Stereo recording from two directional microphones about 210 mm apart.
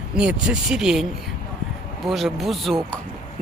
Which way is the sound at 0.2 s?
5° right (ahead or behind).